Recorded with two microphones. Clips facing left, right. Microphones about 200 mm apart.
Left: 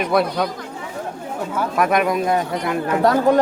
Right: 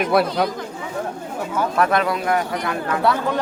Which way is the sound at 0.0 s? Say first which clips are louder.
Right 1 dB; 5° right (ahead or behind).